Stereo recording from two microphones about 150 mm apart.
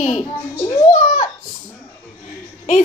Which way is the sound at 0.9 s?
60° left (ahead or behind).